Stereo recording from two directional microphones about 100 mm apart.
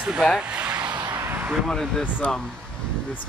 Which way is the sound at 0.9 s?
45° right (ahead or behind).